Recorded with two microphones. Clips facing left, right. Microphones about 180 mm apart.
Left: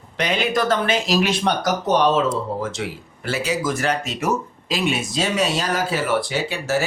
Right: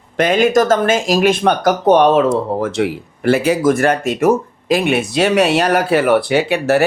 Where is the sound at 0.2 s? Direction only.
45° right (ahead or behind).